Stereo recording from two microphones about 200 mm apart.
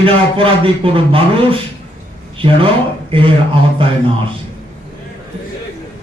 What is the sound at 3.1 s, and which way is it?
Speech, 25° right (ahead or behind).